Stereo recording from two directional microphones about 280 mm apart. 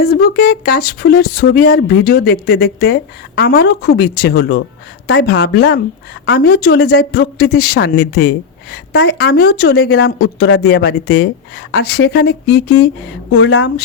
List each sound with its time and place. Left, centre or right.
0.0 s speech: left
13.3 s speech: left